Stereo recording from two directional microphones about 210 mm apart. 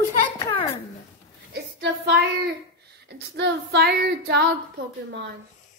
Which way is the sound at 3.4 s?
55° right (ahead or behind).